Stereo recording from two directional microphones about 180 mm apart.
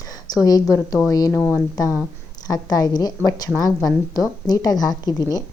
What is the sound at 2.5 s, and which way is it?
A woman's voice, 20° left (ahead or behind).